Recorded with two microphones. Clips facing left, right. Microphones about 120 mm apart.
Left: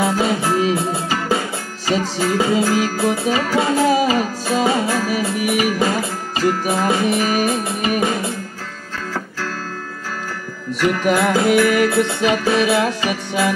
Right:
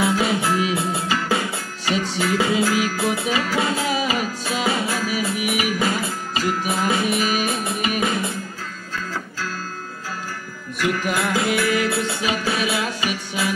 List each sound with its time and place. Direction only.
0.0 s music: 40° left (ahead or behind)
10.8 s music: 60° left (ahead or behind)